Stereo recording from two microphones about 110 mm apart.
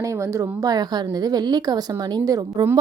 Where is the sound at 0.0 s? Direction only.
30° right (ahead or behind).